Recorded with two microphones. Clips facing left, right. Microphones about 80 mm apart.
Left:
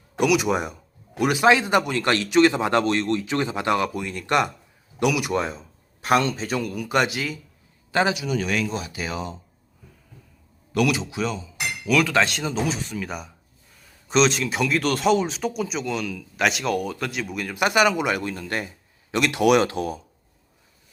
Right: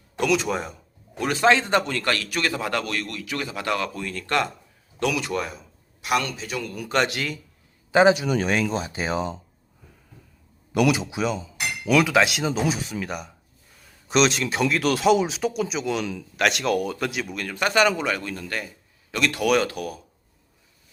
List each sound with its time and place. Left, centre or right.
0.2 s a man's voice: centre
6.0 s a man's voice: left
6.8 s speech: centre
7.9 s a man's voice: centre
8.1 s speech: right
10.7 s a man's voice: centre
17.3 s a man's voice: centre; by 20.0 s left